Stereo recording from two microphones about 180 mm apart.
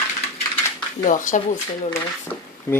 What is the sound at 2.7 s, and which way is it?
Speech, 15° left (ahead or behind).